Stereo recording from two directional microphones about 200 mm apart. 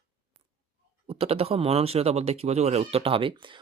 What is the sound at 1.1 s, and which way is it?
Speech, 30° right (ahead or behind).